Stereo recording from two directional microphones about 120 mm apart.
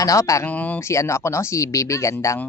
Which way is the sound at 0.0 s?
25° left (ahead or behind).